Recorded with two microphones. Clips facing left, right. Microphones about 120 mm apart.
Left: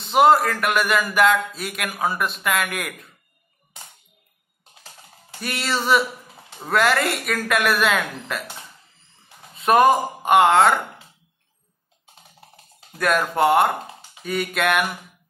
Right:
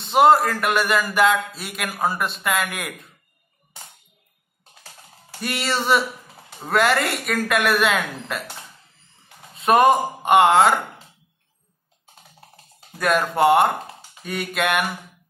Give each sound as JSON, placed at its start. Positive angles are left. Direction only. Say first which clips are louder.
{"t": 0.0, "sound": "speech", "louder": "right 1 dB", "side_deg": 0}
{"t": 4.8, "sound": "speech", "louder": "even", "side_deg": 0}
{"t": 12.9, "sound": "speech", "louder": "even", "side_deg": 0}